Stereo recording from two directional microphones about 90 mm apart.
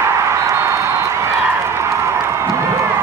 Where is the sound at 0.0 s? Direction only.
30° right (ahead or behind).